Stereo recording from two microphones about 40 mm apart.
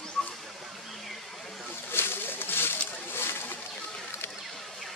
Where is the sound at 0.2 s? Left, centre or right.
Centre.